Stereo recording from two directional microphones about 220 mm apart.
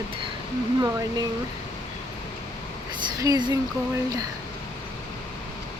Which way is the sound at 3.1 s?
15° right (ahead or behind).